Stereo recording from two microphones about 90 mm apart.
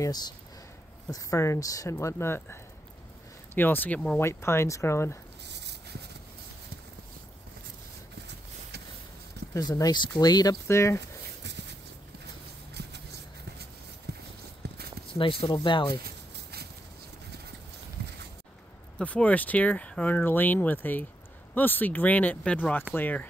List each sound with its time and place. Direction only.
0.0 s speech: 50° left (ahead or behind)
1.1 s speech: 35° left (ahead or behind); by 4.2 s 15° left (ahead or behind)
4.2 s speech: 30° left (ahead or behind)
9.5 s speech: 45° left (ahead or behind)
15.1 s speech: 70° left (ahead or behind)
18.9 s speech: 10° left (ahead or behind)